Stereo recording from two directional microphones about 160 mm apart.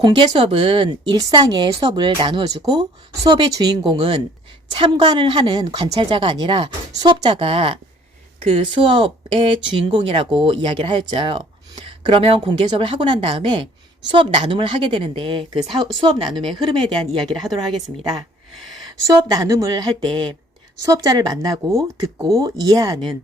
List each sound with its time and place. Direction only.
0.0 s speech: 30° right (ahead or behind)
19.1 s speech: 20° right (ahead or behind)